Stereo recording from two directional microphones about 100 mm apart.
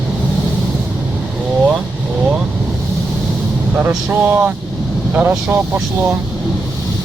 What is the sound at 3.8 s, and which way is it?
Speech, 20° right (ahead or behind).